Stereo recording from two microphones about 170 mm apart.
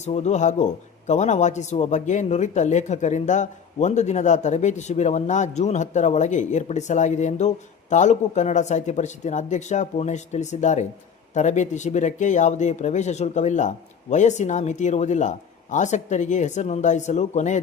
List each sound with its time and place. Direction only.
0.0 s a man's voice: 40° left (ahead or behind)